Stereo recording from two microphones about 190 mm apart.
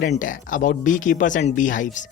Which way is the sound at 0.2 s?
45° left (ahead or behind).